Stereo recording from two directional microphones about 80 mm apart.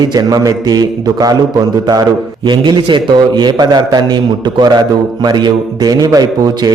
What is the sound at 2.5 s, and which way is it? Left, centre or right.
A man's voice, right.